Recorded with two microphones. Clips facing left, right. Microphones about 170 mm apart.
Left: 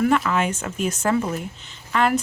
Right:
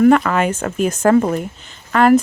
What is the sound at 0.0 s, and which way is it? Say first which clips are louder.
Speech: right 7 dB; 55° right (ahead or behind).